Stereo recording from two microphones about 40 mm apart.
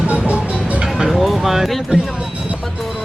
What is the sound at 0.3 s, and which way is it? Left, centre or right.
Music, right.